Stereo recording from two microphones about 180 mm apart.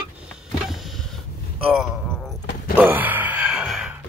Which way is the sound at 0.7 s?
Centre (ahead or behind).